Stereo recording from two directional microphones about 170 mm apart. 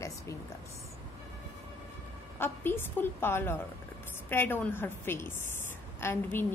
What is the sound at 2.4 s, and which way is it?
Speech, 10° left (ahead or behind).